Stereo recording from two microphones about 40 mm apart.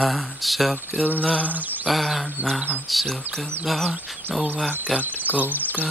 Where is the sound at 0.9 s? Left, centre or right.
Right.